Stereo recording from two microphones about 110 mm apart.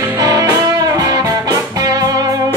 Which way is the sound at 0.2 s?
35° right (ahead or behind).